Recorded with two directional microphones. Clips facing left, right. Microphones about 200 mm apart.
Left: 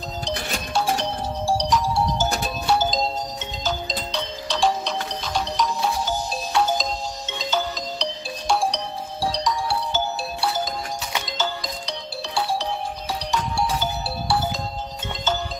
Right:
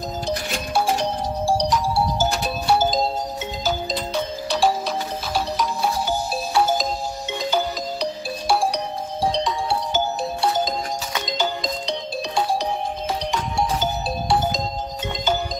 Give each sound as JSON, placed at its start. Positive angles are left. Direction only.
{"t": 0.7, "sound": "music", "side_deg": -15}
{"t": 7.3, "sound": "ringtone", "side_deg": -10}
{"t": 9.2, "sound": "music", "side_deg": -20}